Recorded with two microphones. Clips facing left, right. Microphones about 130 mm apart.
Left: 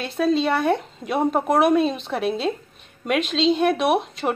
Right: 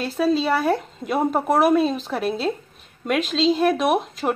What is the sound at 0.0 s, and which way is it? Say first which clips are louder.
Speech: even; centre (ahead or behind).